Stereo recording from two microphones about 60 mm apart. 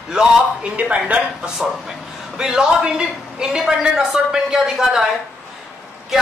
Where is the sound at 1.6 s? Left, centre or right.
Centre.